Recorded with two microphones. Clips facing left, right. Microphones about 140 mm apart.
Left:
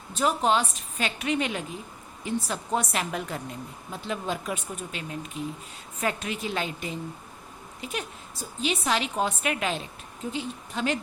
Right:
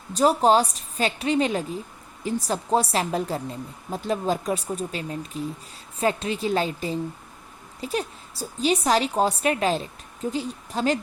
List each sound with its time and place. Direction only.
0.1 s a woman's voice: 35° right (ahead or behind)